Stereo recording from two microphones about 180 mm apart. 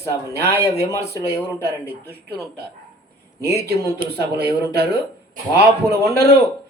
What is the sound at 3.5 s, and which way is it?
A man's voice, 65° right (ahead or behind).